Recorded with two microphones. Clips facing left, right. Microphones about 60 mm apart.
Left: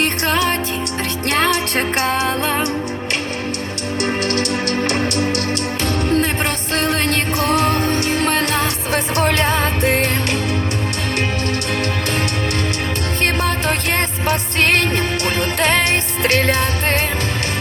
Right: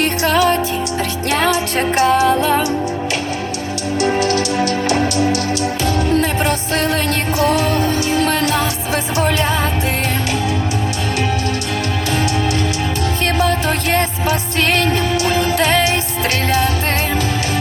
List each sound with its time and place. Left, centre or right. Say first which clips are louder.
0.0 s music: right 3 dB; left
4.0 s music: right 4 dB; left
13.2 s music: right 2 dB; left